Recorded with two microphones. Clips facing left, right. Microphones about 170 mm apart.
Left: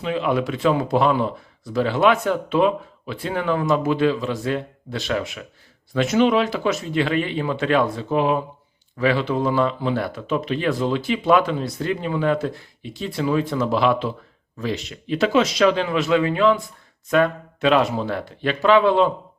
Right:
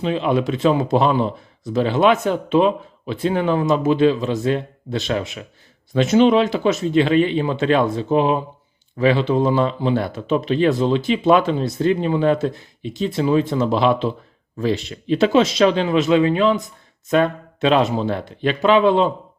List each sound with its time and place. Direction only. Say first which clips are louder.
0.0 s speech: right 3 dB; 25° right (ahead or behind)